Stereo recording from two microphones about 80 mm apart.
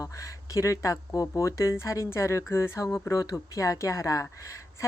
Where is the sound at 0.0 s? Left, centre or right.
Left.